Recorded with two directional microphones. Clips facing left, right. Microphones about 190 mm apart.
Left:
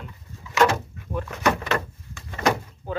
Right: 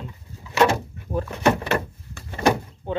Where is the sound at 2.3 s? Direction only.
25° right (ahead or behind).